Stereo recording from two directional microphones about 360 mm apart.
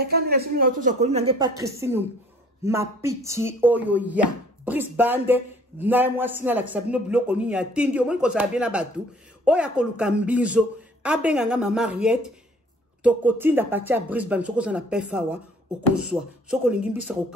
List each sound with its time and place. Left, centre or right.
0.0 s a man's voice: right; by 17.0 s centre